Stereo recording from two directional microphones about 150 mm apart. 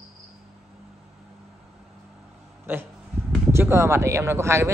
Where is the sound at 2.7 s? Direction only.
15° right (ahead or behind).